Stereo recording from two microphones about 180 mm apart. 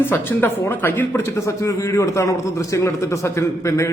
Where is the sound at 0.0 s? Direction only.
10° left (ahead or behind).